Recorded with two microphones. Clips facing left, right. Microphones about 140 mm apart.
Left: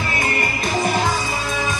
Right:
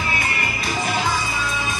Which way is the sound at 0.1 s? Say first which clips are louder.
Left 3 dB; 45° left (ahead or behind).